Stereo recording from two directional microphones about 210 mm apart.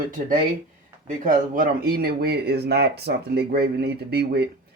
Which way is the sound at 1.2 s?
40° right (ahead or behind).